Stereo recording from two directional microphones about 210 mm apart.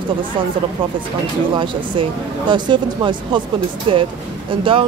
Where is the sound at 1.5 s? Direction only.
25° right (ahead or behind).